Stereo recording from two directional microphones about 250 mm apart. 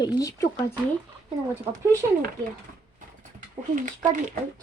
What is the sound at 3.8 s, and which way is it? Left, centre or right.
Speech, right.